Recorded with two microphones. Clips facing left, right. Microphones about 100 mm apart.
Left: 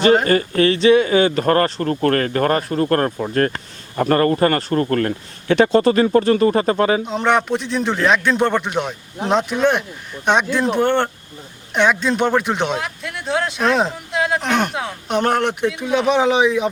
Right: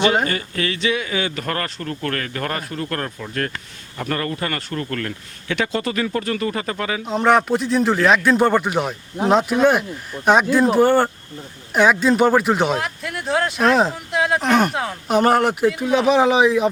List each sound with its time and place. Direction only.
0.3 s speech: 40° left (ahead or behind)
7.0 s speech: centre (ahead or behind)